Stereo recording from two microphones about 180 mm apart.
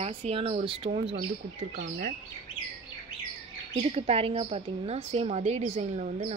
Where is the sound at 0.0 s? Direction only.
35° right (ahead or behind).